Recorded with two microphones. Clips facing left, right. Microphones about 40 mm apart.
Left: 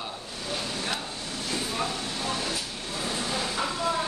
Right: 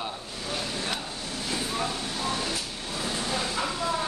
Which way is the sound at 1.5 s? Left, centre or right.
Centre.